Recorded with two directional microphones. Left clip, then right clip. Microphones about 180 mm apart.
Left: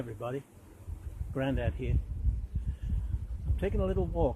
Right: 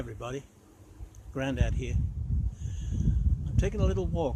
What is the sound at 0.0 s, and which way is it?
Speech, 10° right (ahead or behind).